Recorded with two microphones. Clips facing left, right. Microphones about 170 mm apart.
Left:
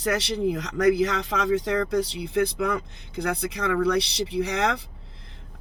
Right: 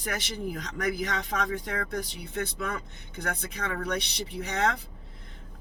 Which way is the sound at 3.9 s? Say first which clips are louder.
Left 8 dB; 80° left.